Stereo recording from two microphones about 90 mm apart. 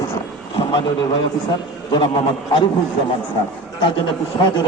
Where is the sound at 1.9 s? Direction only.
70° left (ahead or behind).